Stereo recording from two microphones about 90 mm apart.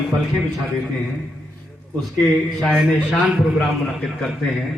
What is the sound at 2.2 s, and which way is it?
A man's voice, centre (ahead or behind).